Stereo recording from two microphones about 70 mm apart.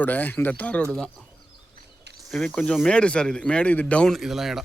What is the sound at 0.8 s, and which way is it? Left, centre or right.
Speech, centre.